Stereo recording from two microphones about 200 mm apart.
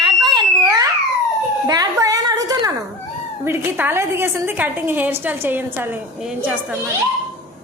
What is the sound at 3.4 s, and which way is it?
A woman's voice, 10° right (ahead or behind).